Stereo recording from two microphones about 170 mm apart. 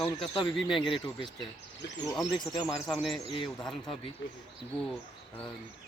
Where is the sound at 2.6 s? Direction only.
Centre (ahead or behind).